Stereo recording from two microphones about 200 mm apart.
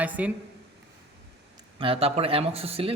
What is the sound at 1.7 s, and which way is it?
Speech, 25° right (ahead or behind).